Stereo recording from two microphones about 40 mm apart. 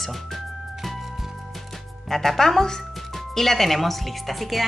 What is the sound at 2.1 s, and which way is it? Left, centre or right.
Speech, centre.